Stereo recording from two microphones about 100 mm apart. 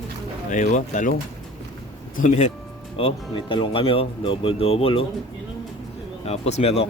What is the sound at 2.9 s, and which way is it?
Speech, 60° left (ahead or behind).